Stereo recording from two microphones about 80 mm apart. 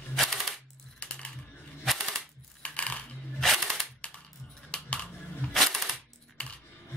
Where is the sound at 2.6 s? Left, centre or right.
Centre.